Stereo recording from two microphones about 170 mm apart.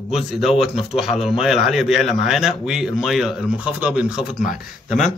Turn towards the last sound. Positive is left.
turn(degrees=-5)  # may be behind; listen again after turning